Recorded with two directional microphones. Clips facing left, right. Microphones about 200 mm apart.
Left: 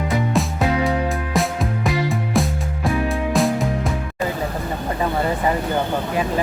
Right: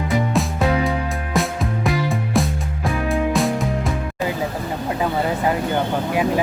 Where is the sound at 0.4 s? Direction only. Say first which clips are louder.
Left 1 dB; centre (ahead or behind).